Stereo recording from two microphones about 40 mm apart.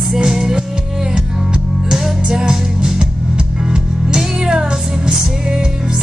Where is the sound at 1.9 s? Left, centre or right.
Centre.